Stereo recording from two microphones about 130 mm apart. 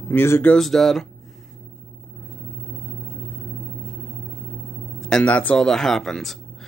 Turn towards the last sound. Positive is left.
turn(degrees=5)  # may be behind; listen again after turning